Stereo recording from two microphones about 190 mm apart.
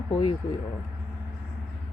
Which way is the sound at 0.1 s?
25° left (ahead or behind).